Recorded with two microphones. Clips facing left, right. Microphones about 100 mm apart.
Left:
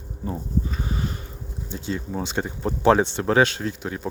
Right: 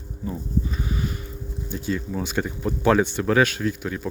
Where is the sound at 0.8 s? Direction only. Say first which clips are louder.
Even; 35° left (ahead or behind).